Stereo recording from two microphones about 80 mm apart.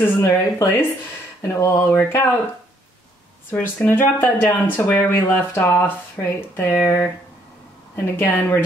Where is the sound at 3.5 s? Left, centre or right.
Left.